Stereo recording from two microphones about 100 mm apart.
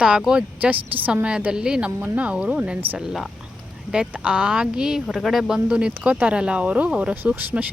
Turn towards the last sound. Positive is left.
turn(degrees=-15)  # may be behind; listen again after turning